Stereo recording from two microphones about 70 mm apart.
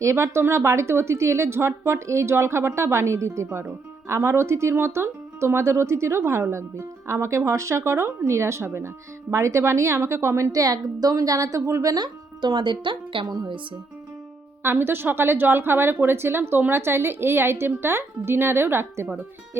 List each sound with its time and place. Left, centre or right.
0.0 s a woman's voice: right
11.9 s speech: right
13.2 s speech: right
14.6 s a woman's voice: right